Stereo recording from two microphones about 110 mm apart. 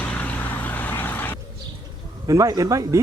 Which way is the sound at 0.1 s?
15° left (ahead or behind).